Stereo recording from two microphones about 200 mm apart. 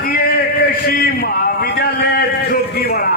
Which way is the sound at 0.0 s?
50° left (ahead or behind).